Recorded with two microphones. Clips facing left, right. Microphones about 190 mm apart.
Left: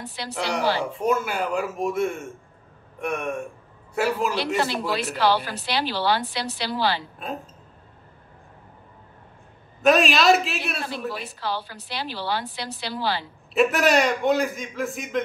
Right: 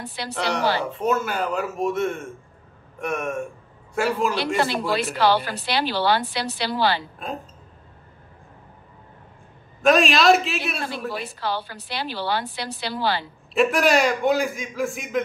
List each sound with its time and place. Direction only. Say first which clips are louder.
0.3 s a man's voice: right 1 dB; 5° left (ahead or behind)
4.9 s a woman's voice: right 2 dB; 60° right (ahead or behind)
9.8 s a man's voice: right 1 dB; centre (ahead or behind)
11.3 s a woman's voice: right 2 dB; 60° right (ahead or behind)
13.6 s a man's voice: right 1 dB; centre (ahead or behind)